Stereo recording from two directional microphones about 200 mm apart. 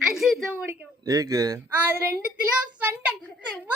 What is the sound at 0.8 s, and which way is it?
Speech, 15° right (ahead or behind).